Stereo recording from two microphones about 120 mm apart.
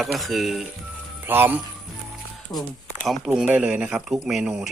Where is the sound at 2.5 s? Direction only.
25° left (ahead or behind).